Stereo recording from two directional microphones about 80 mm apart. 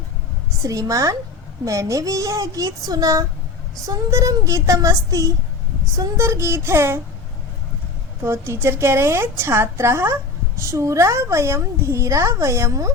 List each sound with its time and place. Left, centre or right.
0.6 s a woman's voice: right
8.2 s a woman's voice: right